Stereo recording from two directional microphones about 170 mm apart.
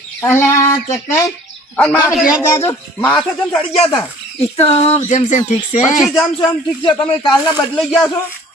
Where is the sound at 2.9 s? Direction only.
5° left (ahead or behind).